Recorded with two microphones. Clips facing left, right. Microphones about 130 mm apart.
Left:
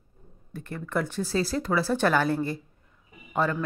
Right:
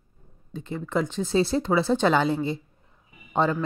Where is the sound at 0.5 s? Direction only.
20° right (ahead or behind).